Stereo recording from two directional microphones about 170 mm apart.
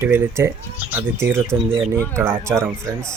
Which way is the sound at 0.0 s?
15° right (ahead or behind).